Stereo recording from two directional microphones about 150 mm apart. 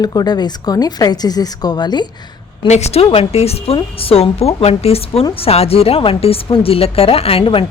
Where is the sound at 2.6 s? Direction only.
45° left (ahead or behind).